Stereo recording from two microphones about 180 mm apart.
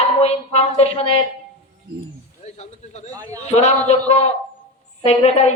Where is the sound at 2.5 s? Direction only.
40° left (ahead or behind).